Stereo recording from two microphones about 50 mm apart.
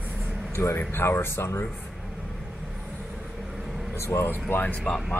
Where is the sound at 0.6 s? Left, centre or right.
Left.